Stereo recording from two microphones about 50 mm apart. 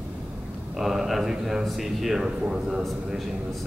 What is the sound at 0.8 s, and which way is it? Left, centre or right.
A man's voice, centre.